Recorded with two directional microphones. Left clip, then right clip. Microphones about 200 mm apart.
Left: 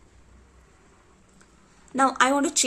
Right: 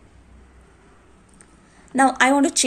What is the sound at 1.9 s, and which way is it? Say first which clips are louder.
Speech: right 4 dB; 30° left (ahead or behind).